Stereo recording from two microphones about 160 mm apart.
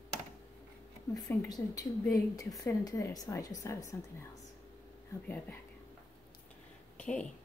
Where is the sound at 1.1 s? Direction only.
20° left (ahead or behind).